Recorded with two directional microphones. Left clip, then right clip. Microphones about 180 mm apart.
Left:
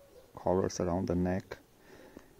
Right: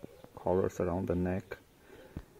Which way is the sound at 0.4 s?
20° left (ahead or behind).